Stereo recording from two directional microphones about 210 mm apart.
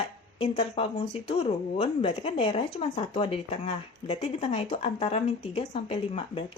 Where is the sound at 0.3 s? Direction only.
30° left (ahead or behind).